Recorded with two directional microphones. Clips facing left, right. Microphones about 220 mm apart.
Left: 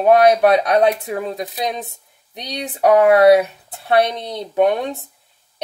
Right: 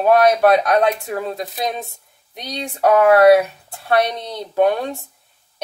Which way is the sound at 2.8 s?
20° left (ahead or behind).